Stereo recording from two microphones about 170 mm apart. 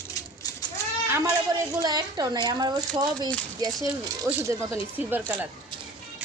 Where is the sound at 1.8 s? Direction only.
25° right (ahead or behind).